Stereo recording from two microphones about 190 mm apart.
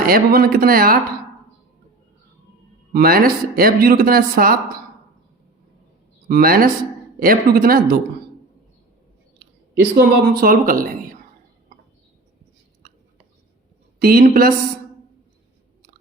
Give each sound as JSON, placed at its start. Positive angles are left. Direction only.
{"t": 0.0, "sound": "speech", "side_deg": -50}
{"t": 2.9, "sound": "speech", "side_deg": -50}
{"t": 6.2, "sound": "speech", "side_deg": -50}
{"t": 9.9, "sound": "speech", "side_deg": -50}
{"t": 14.0, "sound": "speech", "side_deg": -50}